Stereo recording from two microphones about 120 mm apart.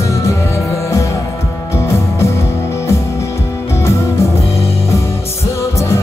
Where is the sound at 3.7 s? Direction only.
25° left (ahead or behind).